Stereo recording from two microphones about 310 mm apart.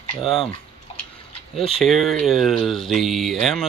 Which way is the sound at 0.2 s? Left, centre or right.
Centre.